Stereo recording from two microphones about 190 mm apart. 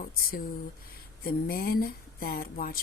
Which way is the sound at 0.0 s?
50° left (ahead or behind).